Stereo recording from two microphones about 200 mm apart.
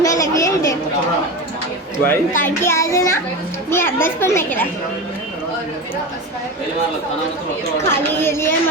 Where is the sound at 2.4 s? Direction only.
10° left (ahead or behind).